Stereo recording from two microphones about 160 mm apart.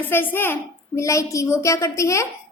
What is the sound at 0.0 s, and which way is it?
A woman's voice, 10° left (ahead or behind).